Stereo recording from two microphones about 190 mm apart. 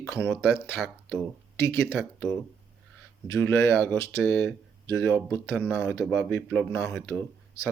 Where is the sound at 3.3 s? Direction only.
15° left (ahead or behind).